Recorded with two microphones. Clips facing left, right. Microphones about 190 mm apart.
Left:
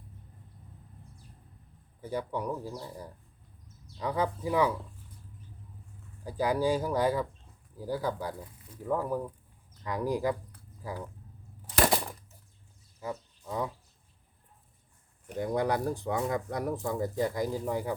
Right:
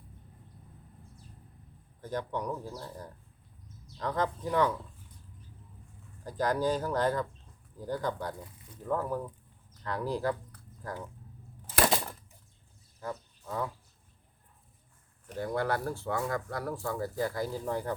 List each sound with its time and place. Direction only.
2.0 s speech: 10° left (ahead or behind)
6.2 s speech: 10° left (ahead or behind)
13.0 s a sound: 10° left (ahead or behind)
15.3 s speech: 15° left (ahead or behind)